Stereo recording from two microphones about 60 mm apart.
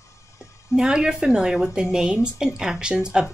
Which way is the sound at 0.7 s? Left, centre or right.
Centre.